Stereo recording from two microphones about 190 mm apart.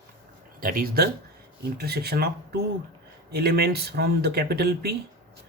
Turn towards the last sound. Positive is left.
turn(degrees=-55)  # may be behind; listen again after turning